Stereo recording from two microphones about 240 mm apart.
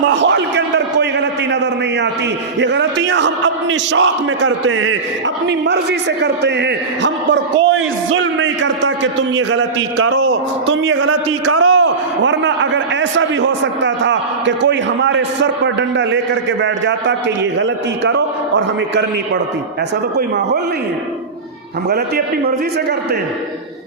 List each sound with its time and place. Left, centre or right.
0.2 s a sound: right
2.6 s a man's voice: right
5.5 s a man's voice: right
11.8 s a man's voice: right
21.8 s a man's voice: right